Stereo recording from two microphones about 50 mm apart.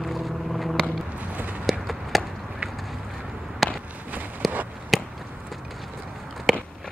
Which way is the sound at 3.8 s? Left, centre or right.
Right.